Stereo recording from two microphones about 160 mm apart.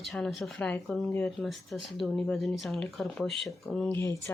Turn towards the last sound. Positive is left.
turn(degrees=15)  # may be behind; listen again after turning